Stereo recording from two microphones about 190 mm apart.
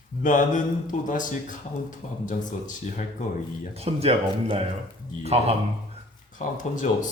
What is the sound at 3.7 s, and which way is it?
Speech, 35° right (ahead or behind).